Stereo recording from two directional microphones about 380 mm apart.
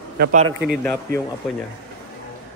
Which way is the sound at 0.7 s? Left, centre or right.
Centre.